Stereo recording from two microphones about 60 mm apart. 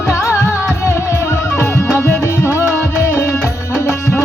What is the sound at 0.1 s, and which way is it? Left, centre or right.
Music, left.